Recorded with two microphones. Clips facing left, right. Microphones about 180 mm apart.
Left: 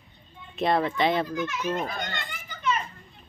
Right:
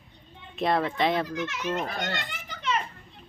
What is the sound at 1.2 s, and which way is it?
Speech, 75° right (ahead or behind).